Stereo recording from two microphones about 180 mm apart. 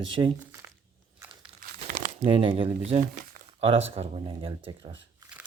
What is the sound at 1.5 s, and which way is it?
Crumpling, 50° right (ahead or behind).